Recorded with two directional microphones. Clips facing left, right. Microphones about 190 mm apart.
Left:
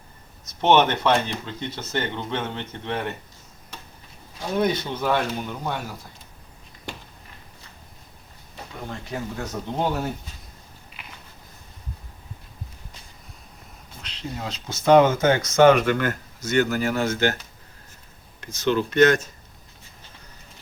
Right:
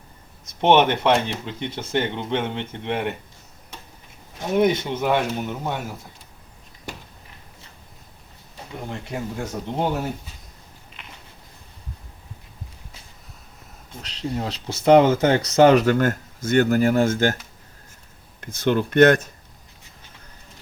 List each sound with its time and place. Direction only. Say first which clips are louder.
0.6 s speech: right 2 dB; 15° right (ahead or behind)
4.4 s speech: right 4 dB; 20° right (ahead or behind)
8.9 s speech: right 1 dB; 10° right (ahead or behind)
14.0 s speech: right 5 dB; 35° right (ahead or behind)
18.3 s speech: right 1 dB; 55° right (ahead or behind)